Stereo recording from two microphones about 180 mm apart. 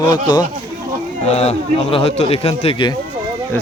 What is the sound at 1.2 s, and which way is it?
Speech, 35° left (ahead or behind).